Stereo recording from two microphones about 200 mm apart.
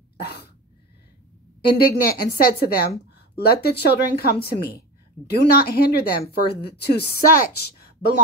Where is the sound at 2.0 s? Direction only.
50° left (ahead or behind).